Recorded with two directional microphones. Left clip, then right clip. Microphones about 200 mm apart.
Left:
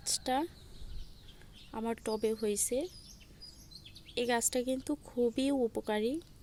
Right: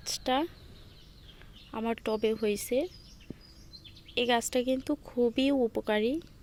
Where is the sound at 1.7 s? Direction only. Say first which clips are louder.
Right 4 dB; 10° left (ahead or behind).